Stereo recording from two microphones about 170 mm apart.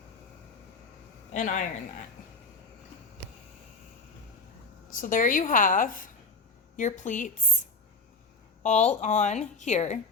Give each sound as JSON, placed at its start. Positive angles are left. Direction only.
{"t": 1.3, "sound": "a man's voice", "side_deg": 45}
{"t": 4.9, "sound": "a woman's voice", "side_deg": 50}
{"t": 8.6, "sound": "a woman's voice", "side_deg": 45}